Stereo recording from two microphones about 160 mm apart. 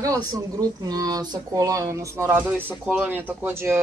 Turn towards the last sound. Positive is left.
turn(degrees=-15)  # may be behind; listen again after turning